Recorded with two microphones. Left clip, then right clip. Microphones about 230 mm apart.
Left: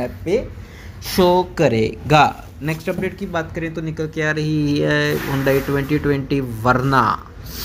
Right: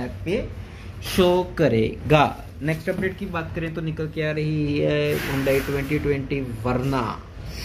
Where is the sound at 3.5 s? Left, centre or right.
Centre; by 7.6 s left.